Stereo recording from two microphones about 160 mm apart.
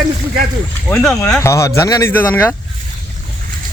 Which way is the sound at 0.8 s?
5° left (ahead or behind).